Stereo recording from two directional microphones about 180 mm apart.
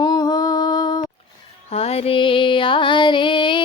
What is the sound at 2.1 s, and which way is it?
Music, 30° left (ahead or behind).